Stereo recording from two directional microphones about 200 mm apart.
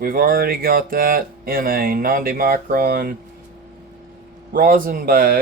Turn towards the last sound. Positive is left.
turn(degrees=-45)  # may be behind; listen again after turning